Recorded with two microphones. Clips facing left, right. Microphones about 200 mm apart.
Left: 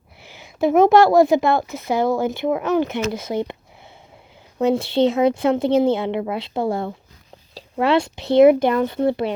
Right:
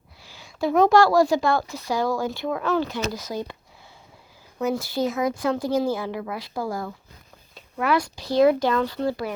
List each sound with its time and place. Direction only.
0.2 s a woman's voice: 20° left (ahead or behind)
4.6 s a woman's voice: 25° left (ahead or behind)